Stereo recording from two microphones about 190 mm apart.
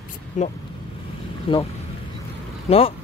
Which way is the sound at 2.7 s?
30° left (ahead or behind).